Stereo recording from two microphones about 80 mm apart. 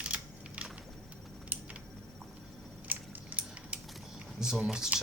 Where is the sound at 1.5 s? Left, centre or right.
Right.